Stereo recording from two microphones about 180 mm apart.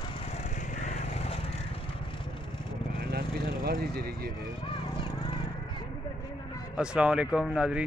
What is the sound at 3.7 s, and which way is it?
Speech, 60° right (ahead or behind).